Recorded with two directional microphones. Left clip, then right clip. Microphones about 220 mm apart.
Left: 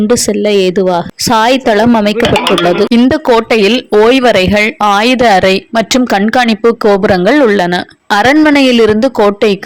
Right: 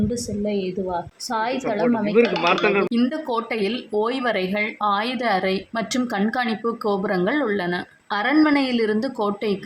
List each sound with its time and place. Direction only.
0.1 s speech: 50° left (ahead or behind)